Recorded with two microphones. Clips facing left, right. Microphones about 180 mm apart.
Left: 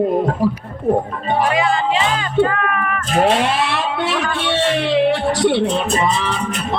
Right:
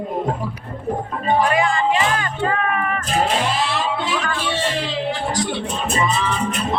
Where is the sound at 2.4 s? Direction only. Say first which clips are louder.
Left 1 dB; 30° right (ahead or behind).